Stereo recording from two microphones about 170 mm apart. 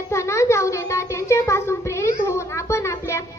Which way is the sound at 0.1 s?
15° left (ahead or behind).